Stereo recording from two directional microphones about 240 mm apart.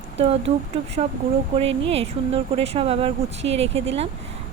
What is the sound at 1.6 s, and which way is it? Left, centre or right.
Speech, right.